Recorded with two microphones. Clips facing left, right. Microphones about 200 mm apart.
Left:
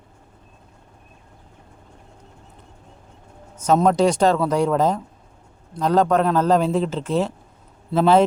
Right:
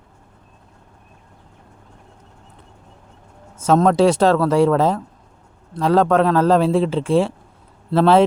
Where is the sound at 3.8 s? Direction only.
Centre (ahead or behind).